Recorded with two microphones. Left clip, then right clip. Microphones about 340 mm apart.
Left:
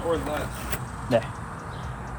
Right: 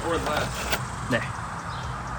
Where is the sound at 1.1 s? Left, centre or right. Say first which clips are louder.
Left 4 dB; centre.